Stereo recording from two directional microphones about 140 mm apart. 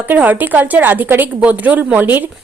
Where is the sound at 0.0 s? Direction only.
10° right (ahead or behind).